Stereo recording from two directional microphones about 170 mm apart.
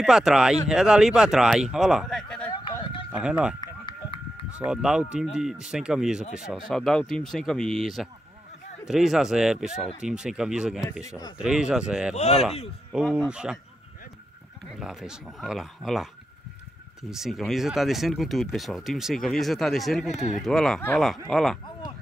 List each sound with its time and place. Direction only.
0.0 s speech: 5° right (ahead or behind)
2.5 s a sound: 30° left (ahead or behind)
3.1 s speech: 5° right (ahead or behind)
3.6 s run: 30° left (ahead or behind)
4.6 s speech: 5° right (ahead or behind)
12.2 s speech: 40° left (ahead or behind)
12.9 s speech: centre (ahead or behind)
14.8 s speech: 5° right (ahead or behind)
17.1 s speech: centre (ahead or behind)